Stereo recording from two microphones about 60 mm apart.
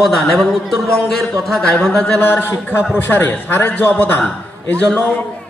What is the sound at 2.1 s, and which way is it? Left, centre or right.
A man's voice, left.